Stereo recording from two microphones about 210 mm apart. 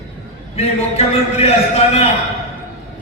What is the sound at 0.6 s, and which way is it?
A man's voice, 30° left (ahead or behind).